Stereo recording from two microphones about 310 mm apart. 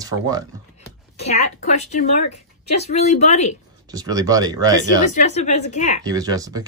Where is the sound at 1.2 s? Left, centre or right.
Left.